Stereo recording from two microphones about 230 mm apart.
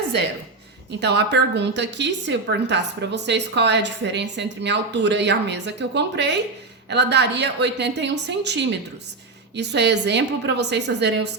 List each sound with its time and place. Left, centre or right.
0.9 s a woman's voice: right